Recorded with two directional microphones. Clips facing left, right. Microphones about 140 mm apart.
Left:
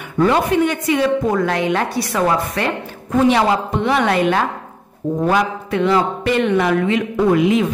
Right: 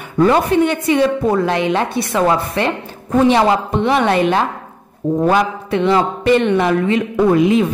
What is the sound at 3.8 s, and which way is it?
A woman's voice, 25° right (ahead or behind).